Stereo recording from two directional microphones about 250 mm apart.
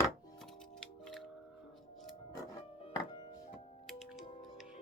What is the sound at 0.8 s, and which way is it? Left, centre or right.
Music, centre.